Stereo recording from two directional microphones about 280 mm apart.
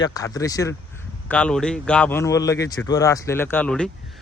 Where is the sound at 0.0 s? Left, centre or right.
Centre.